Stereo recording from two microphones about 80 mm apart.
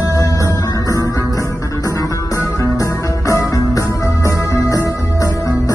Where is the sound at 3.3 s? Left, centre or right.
Left.